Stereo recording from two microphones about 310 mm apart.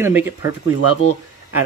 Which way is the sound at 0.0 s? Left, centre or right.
Centre.